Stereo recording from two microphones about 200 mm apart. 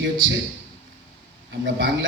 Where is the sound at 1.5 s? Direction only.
60° right (ahead or behind).